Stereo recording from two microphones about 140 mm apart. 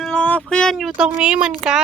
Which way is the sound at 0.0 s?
5° left (ahead or behind).